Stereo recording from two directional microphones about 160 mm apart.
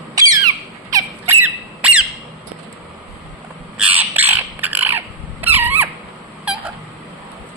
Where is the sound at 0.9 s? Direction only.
15° right (ahead or behind).